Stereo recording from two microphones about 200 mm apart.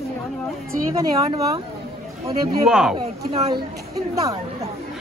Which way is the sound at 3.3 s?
25° right (ahead or behind).